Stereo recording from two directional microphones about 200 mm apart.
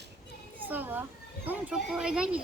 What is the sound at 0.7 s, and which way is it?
A woman's voice, 10° right (ahead or behind).